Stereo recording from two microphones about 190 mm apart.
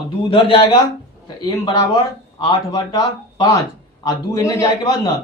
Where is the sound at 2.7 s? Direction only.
20° left (ahead or behind).